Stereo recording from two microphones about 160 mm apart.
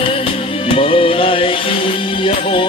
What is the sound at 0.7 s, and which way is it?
Music, 35° left (ahead or behind).